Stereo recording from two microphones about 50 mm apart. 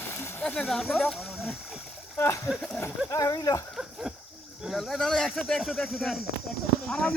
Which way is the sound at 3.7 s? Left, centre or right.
Centre.